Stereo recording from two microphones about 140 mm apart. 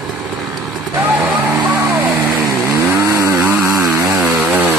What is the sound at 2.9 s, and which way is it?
Chainsaw, 20° right (ahead or behind).